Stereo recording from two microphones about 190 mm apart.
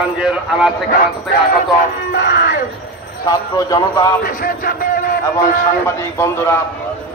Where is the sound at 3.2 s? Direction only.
20° left (ahead or behind).